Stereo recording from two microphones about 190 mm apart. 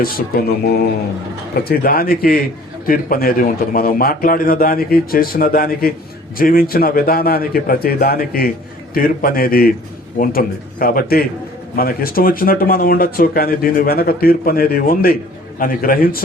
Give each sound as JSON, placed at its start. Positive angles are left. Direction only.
{"t": 1.5, "sound": "speech", "side_deg": 50}